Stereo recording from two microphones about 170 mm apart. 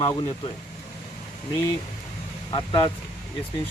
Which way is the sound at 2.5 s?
25° left (ahead or behind).